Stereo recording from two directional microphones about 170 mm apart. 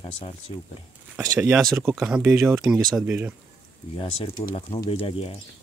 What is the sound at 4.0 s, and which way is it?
Speech, 35° left (ahead or behind).